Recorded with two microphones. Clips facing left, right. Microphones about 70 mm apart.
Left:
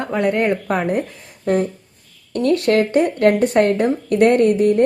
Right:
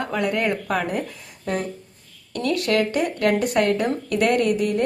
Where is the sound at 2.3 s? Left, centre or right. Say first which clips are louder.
Left 6 dB; left.